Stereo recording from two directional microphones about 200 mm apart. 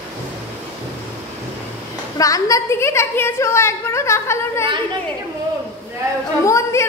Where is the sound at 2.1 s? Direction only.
15° left (ahead or behind).